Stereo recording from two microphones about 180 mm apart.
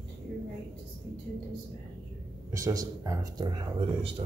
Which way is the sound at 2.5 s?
20° right (ahead or behind).